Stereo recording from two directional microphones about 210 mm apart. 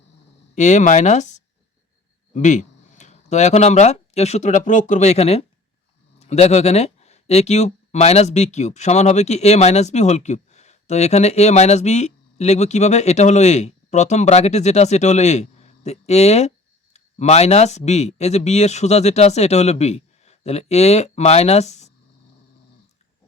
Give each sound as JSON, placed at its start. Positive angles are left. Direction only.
{"t": 0.5, "sound": "speech", "side_deg": 35}
{"t": 2.3, "sound": "speech", "side_deg": 35}